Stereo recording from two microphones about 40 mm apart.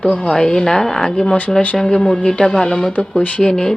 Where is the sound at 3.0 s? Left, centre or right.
Left.